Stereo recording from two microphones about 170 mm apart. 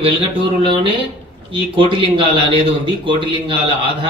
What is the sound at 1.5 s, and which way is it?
A man's voice, 30° right (ahead or behind).